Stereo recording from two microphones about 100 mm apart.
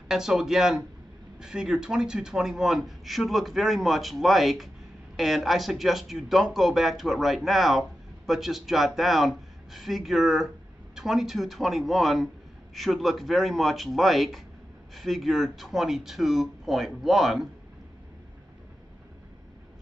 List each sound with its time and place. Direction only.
0.1 s a man's voice: 5° right (ahead or behind)